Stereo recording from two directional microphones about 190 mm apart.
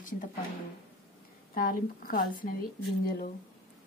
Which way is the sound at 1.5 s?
50° left (ahead or behind).